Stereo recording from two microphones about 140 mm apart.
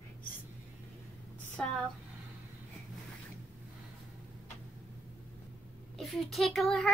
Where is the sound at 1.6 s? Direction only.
10° left (ahead or behind).